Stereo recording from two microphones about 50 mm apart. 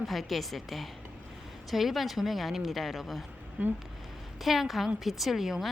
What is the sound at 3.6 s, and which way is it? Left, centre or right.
Speech, right.